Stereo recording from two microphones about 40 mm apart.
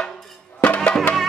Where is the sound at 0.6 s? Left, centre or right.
Left.